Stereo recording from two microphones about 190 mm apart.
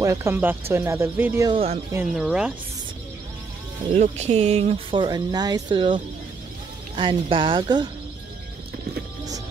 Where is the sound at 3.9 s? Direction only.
35° right (ahead or behind).